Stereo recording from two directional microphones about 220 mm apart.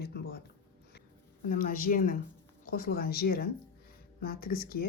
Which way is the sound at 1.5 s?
40° left (ahead or behind).